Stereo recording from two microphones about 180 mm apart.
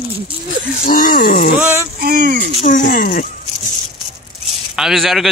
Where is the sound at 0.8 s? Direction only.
50° left (ahead or behind).